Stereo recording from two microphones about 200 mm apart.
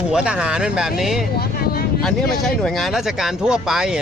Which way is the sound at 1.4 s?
50° left (ahead or behind).